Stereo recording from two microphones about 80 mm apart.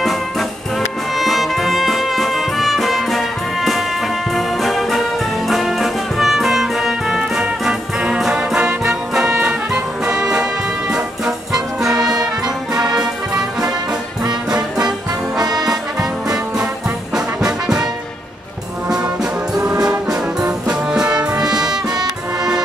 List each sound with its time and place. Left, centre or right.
1.1 s music: centre
4.4 s brass instrument: centre
10.9 s music: centre
15.4 s music: right
17.1 s brass instrument: centre
19.5 s brass instrument: centre